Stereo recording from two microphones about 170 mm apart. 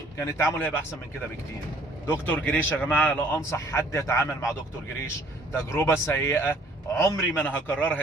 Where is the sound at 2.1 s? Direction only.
10° left (ahead or behind).